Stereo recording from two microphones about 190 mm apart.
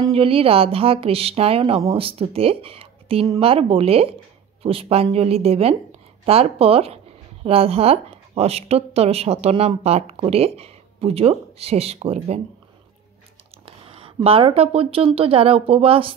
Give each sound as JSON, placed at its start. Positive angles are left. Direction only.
{"t": 0.1, "sound": "a woman's voice", "side_deg": -30}
{"t": 13.7, "sound": "speech", "side_deg": -30}